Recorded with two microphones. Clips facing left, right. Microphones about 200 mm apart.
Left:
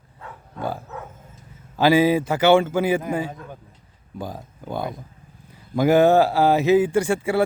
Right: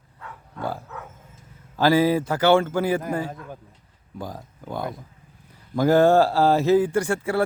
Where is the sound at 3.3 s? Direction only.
Centre (ahead or behind).